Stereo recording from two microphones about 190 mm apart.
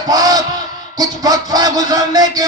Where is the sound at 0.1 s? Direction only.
20° right (ahead or behind).